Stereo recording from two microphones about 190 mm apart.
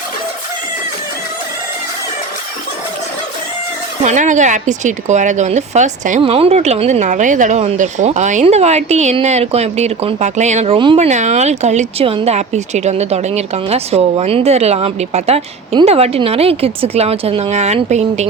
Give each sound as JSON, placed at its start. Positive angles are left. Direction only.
{"t": 4.0, "sound": "a woman's voice", "side_deg": -40}